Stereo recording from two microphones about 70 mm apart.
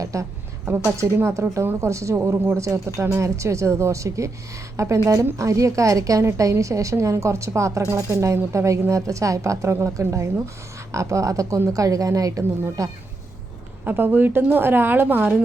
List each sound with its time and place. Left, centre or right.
0.0 s a woman's voice: right
13.8 s a woman's voice: right